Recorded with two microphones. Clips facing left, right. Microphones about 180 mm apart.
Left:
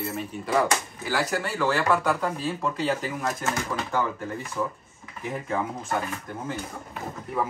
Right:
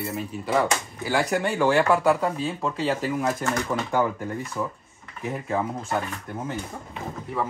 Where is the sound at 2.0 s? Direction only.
Centre (ahead or behind).